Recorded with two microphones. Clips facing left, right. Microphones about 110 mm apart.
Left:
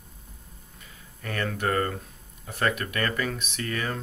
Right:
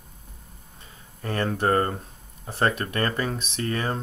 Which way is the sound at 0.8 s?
30° right (ahead or behind).